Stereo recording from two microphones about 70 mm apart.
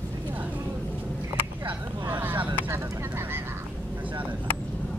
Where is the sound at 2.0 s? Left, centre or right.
Right.